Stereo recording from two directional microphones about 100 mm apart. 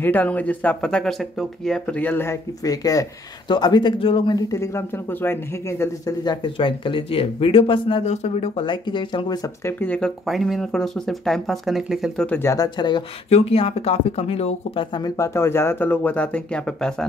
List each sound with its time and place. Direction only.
0.0 s speech: 15° left (ahead or behind)
2.0 s speech: 20° left (ahead or behind)
2.6 s speech: 40° left (ahead or behind)
3.4 s speech: 45° left (ahead or behind)
4.4 s speech: 30° left (ahead or behind)
6.0 s speech: 50° left (ahead or behind); by 8.6 s 90° left
8.6 s speech: 50° left (ahead or behind)
9.7 s speech: 20° left (ahead or behind)
9.9 s speech: 5° left (ahead or behind)
12.3 s speech: 20° left (ahead or behind)
12.5 s speech: 45° left (ahead or behind)
13.3 s speech: 80° left
15.0 s speech: 30° left (ahead or behind); by 16.9 s 10° left (ahead or behind)